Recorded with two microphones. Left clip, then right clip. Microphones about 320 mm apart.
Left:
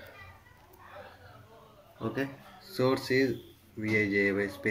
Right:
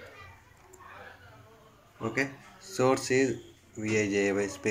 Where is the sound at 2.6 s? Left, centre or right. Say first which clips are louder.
Right 2 dB; right.